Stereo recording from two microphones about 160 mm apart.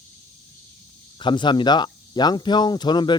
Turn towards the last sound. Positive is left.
turn(degrees=30)  # may be behind; listen again after turning